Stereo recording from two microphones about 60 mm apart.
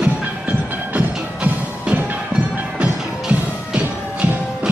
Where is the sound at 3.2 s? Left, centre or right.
Centre.